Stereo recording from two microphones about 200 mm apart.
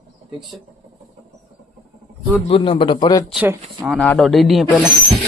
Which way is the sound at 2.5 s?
25° left (ahead or behind).